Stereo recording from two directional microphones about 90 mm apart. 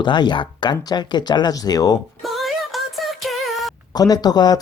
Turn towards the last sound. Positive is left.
turn(degrees=50)  # may be behind; listen again after turning